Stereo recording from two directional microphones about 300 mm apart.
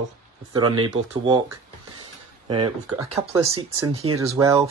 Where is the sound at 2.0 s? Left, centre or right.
Centre.